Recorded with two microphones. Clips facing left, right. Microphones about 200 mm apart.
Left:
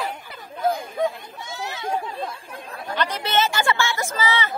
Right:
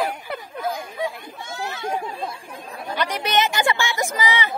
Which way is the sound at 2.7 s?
15° right (ahead or behind).